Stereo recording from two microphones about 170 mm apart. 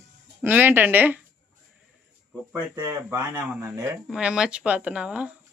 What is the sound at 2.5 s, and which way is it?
Speech, 20° right (ahead or behind).